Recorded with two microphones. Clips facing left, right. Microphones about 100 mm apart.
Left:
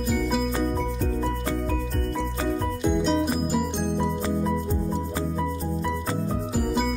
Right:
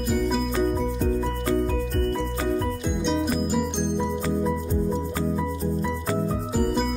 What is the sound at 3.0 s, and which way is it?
Music, centre (ahead or behind).